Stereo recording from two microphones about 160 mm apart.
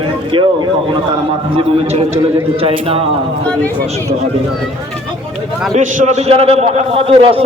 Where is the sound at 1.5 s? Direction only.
40° right (ahead or behind).